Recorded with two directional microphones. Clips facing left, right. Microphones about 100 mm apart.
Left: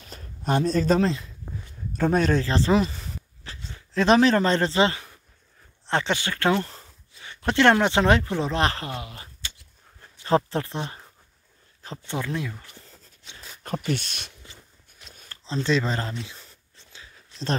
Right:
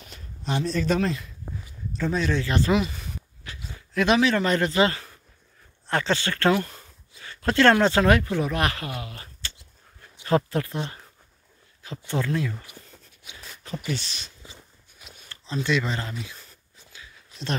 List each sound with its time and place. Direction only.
0.1 s speech: 40° left (ahead or behind)
2.0 s speech: 50° left (ahead or behind)
2.4 s speech: 30° left (ahead or behind)
3.5 s a sound: 10° right (ahead or behind)
3.9 s a man's voice: 35° left (ahead or behind)
12.1 s speech: 20° left (ahead or behind)
12.9 s zipper: 5° right (ahead or behind)
13.8 s speech: 55° left (ahead or behind)
15.0 s shuffling cards: 5° right (ahead or behind)
15.4 s speech: 30° left (ahead or behind)
17.3 s a sound: 5° right (ahead or behind)